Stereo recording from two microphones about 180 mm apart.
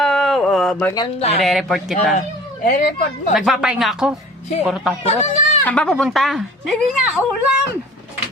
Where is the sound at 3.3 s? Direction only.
5° right (ahead or behind).